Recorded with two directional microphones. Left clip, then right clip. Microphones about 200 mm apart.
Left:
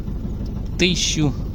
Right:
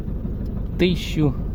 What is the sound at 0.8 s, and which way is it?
Speech, 5° right (ahead or behind).